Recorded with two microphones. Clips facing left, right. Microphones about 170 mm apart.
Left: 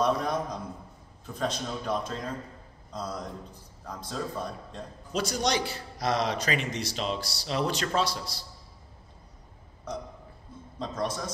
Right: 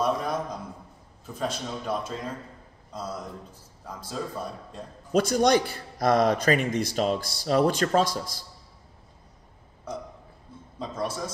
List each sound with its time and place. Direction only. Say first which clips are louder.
0.0 s a man's voice: even; 5° right (ahead or behind)
5.1 s a man's voice: right 7 dB; 55° right (ahead or behind)
10.8 s a man's voice: right 1 dB; 5° right (ahead or behind)